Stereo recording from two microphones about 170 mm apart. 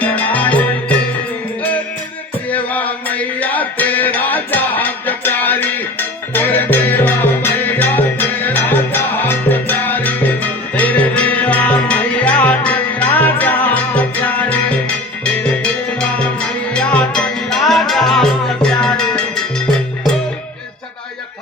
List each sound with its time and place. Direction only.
0.0 s music: 10° left (ahead or behind)
2.5 s music: 10° left (ahead or behind)